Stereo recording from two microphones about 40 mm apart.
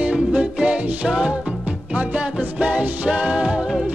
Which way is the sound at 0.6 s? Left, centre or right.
Right.